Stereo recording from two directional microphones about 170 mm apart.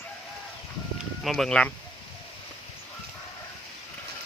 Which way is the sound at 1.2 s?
Centre (ahead or behind).